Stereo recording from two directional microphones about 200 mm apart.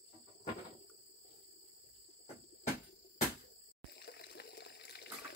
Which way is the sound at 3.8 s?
55° left (ahead or behind).